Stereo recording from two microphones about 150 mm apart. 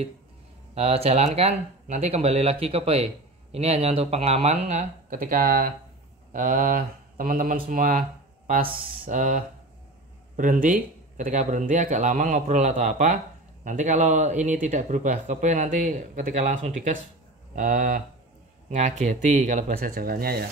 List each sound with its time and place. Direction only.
0.7 s speech: 40° right (ahead or behind)
17.6 s speech: 70° right (ahead or behind)
18.7 s speech: 55° right (ahead or behind)
19.7 s speech: 75° right (ahead or behind)